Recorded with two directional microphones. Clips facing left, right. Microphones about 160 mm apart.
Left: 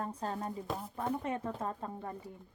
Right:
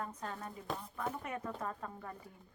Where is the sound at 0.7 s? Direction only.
Centre (ahead or behind).